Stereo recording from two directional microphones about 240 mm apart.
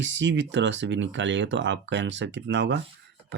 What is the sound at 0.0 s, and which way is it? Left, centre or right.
Speech, right.